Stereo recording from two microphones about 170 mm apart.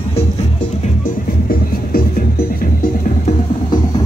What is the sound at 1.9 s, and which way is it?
Music, 50° left (ahead or behind).